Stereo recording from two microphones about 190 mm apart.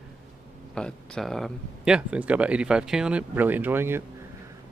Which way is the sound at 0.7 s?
5° left (ahead or behind).